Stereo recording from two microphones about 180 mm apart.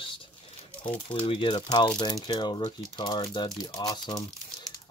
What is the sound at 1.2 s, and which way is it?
Speech, 25° left (ahead or behind).